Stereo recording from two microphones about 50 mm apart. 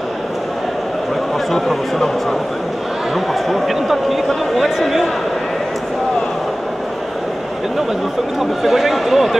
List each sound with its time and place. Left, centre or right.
1.5 s speech: centre
3.4 s speech: centre
8.4 s speech: centre